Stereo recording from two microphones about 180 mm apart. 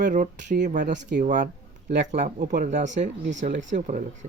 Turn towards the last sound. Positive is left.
turn(degrees=-45)  # may be behind; listen again after turning